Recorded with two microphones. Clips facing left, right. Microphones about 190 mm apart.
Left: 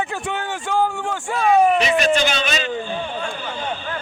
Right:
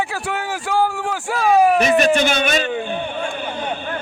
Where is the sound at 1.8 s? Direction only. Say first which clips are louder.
Right 3 dB; 50° right (ahead or behind).